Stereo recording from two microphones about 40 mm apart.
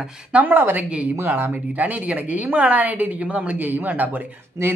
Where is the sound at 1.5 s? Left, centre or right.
Right.